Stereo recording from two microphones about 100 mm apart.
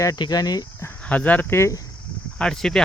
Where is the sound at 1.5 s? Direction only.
30° left (ahead or behind).